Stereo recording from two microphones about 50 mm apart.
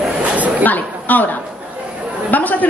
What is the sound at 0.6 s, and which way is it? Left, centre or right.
A man's voice, left.